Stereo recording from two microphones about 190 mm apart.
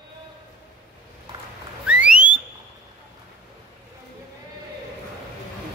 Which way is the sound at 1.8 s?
5° right (ahead or behind).